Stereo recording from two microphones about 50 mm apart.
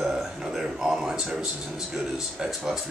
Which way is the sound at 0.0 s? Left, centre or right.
Centre.